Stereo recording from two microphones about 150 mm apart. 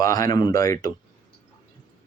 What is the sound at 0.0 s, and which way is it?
Speech, 25° left (ahead or behind).